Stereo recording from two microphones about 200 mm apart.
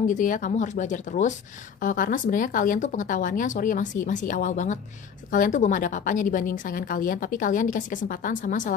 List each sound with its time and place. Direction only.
0.0 s a woman's voice: 40° left (ahead or behind)